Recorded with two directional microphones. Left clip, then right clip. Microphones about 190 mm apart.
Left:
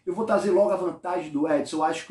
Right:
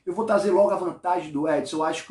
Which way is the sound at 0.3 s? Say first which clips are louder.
Right 2 dB; 15° right (ahead or behind).